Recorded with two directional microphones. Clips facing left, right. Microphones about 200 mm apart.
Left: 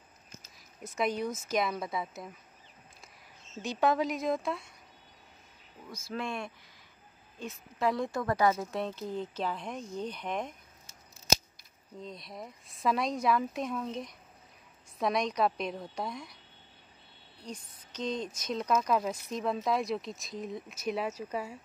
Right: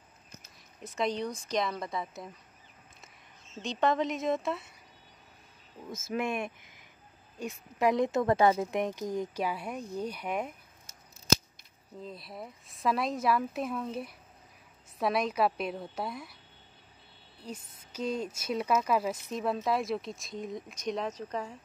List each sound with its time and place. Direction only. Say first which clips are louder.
0.9 s speech: even; 5° left (ahead or behind)
3.6 s speech: even; 5° left (ahead or behind)
6.0 s speech: right 4 dB; 20° right (ahead or behind)
12.0 s speech: right 1 dB; 5° right (ahead or behind)
17.4 s speech: right 1 dB; 5° right (ahead or behind)